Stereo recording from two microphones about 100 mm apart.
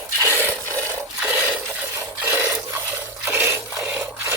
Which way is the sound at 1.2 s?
20° right (ahead or behind).